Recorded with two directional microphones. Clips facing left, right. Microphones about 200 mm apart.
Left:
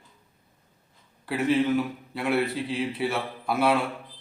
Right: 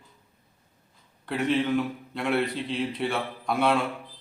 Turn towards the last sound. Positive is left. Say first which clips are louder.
# left 1 dB
turn(degrees=5)  # may be behind; listen again after turning